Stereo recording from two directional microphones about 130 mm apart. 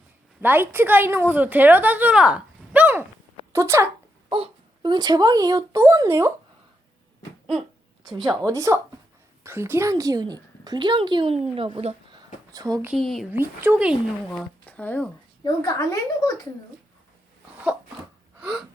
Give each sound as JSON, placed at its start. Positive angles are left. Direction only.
{"t": 0.4, "sound": "a woman's voice", "side_deg": -15}
{"t": 4.3, "sound": "speech", "side_deg": -40}
{"t": 8.0, "sound": "speech", "side_deg": -30}
{"t": 12.1, "sound": "a sound", "side_deg": -30}
{"t": 12.9, "sound": "speech", "side_deg": 0}
{"t": 13.3, "sound": "a woman's voice", "side_deg": -15}
{"t": 14.3, "sound": "speech", "side_deg": 10}
{"t": 15.4, "sound": "a woman's voice", "side_deg": 25}
{"t": 18.3, "sound": "gasp", "side_deg": -5}